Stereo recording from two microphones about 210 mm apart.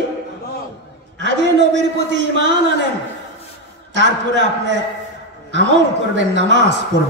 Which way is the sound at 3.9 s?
60° right (ahead or behind).